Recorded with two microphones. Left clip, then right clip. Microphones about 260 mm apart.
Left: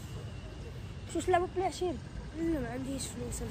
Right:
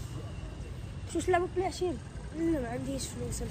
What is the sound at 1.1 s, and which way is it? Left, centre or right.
Speech, centre.